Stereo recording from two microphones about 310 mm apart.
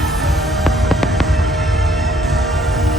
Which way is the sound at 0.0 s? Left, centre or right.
Centre.